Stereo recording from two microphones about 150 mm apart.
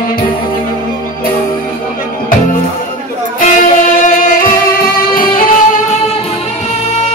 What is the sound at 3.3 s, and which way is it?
Music, 60° left (ahead or behind).